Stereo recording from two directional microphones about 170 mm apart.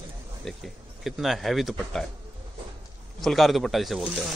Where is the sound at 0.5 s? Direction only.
Centre (ahead or behind).